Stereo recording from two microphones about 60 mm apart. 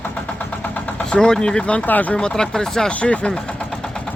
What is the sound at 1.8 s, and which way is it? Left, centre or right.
Speech, left.